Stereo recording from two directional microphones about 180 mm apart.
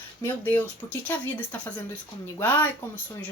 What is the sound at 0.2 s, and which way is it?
Speech, 10° left (ahead or behind).